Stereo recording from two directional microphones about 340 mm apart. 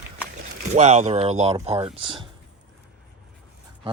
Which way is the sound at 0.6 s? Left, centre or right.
Centre.